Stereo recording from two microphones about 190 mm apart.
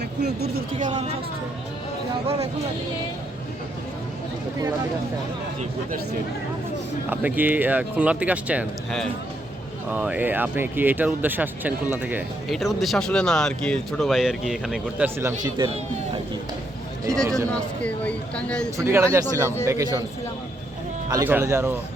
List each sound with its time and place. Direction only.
0.0 s speech: 60° right (ahead or behind); by 1.1 s 40° right (ahead or behind)
7.1 s speech: 10° right (ahead or behind)
15.4 s speech: 20° right (ahead or behind)
17.2 s speech: 15° right (ahead or behind)
17.5 s speech: 5° left (ahead or behind)
18.8 s speech: 15° right (ahead or behind)
21.1 s speech: 15° right (ahead or behind)